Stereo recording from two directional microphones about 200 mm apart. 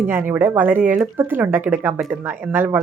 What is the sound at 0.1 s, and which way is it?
Speech, 10° right (ahead or behind).